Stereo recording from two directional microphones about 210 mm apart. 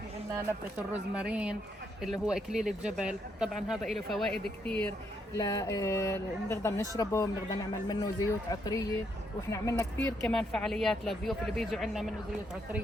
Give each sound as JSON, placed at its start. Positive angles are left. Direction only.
{"t": 1.1, "sound": "speech", "side_deg": -5}
{"t": 5.3, "sound": "speech", "side_deg": 15}
{"t": 10.2, "sound": "speech", "side_deg": 5}